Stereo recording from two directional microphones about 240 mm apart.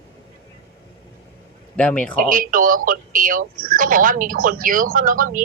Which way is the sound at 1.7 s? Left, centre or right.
Centre.